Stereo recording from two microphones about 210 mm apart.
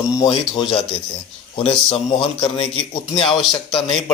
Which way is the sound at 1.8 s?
25° left (ahead or behind).